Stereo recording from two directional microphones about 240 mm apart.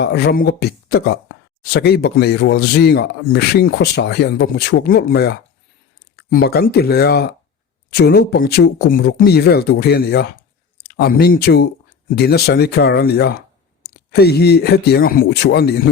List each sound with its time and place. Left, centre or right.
0.0 s speech: left